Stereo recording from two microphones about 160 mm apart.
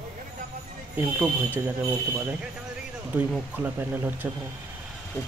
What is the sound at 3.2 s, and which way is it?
Speech, 10° right (ahead or behind).